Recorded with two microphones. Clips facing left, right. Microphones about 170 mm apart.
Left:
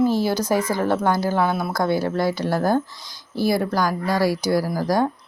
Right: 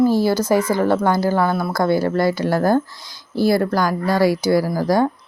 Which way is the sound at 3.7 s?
10° left (ahead or behind).